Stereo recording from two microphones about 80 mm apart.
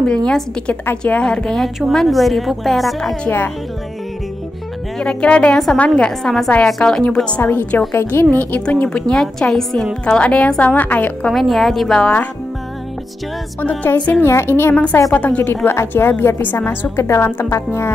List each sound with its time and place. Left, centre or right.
0.0 s a woman's voice: centre
3.3 s a woman's voice: left
4.9 s a woman's voice: centre
7.4 s a woman's voice: left
11.2 s a woman's voice: centre
13.6 s a woman's voice: left
14.2 s a woman's voice: left
17.5 s music: left